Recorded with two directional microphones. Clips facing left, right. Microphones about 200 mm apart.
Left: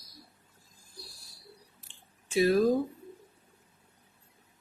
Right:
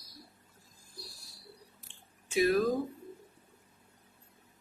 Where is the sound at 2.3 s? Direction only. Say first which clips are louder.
Left 2 dB; 30° left (ahead or behind).